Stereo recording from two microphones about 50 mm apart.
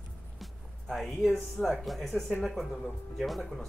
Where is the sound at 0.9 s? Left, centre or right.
Centre.